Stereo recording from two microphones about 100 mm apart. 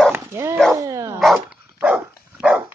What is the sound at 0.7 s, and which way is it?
Dog, 35° right (ahead or behind).